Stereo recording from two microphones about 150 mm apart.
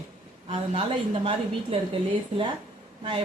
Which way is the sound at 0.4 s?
40° right (ahead or behind).